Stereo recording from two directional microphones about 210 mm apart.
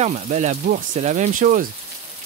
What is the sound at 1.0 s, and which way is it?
Speech, 35° right (ahead or behind).